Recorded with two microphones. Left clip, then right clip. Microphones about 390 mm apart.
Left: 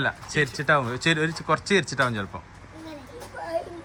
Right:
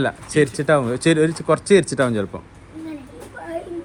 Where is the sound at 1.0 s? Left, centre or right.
Centre.